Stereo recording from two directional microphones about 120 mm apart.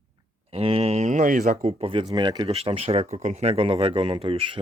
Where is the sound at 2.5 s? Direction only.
55° right (ahead or behind).